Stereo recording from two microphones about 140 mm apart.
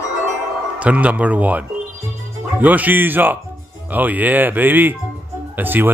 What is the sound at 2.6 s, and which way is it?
Speech, 10° right (ahead or behind).